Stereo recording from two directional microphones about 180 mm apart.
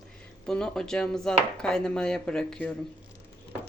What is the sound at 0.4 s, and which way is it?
Speech, 5° left (ahead or behind).